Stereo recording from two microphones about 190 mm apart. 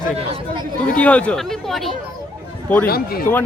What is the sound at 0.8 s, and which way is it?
Speech, 5° left (ahead or behind).